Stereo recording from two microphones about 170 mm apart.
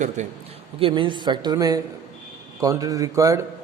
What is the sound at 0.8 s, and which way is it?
A man's voice, 30° right (ahead or behind).